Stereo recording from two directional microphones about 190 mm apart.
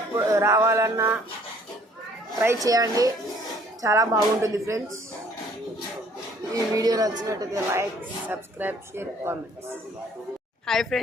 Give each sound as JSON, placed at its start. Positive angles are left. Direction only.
{"t": 0.2, "sound": "speech", "side_deg": -15}
{"t": 2.6, "sound": "speech", "side_deg": -20}
{"t": 6.5, "sound": "speech", "side_deg": -20}
{"t": 10.7, "sound": "a woman's voice", "side_deg": 0}